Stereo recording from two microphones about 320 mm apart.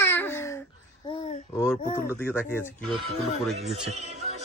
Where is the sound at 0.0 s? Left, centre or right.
Centre.